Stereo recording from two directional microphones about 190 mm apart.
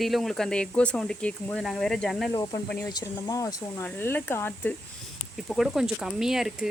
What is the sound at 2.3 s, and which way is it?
Speech, 20° left (ahead or behind).